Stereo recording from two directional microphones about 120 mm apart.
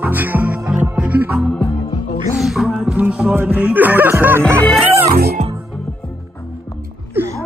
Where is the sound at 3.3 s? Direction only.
20° right (ahead or behind).